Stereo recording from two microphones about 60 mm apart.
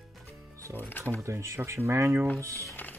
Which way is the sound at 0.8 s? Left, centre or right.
Left.